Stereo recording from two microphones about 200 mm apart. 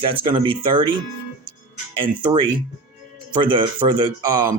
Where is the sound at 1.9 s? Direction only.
25° right (ahead or behind).